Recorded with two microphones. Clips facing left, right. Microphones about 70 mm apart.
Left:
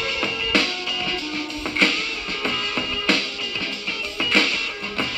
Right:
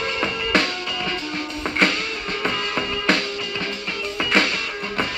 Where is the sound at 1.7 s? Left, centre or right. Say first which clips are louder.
Right 2 dB; right.